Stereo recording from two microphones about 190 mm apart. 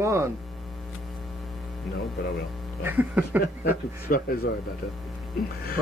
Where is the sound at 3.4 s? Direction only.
55° left (ahead or behind).